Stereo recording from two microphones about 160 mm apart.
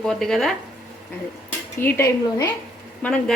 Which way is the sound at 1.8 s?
15° left (ahead or behind).